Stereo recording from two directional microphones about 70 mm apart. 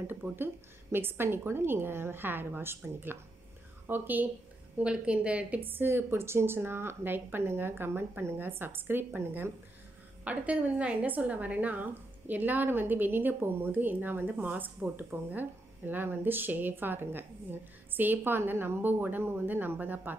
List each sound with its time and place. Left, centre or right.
0.0 s a woman's voice: right
4.7 s a woman's voice: centre
5.7 s a woman's voice: right
10.2 s a woman's voice: centre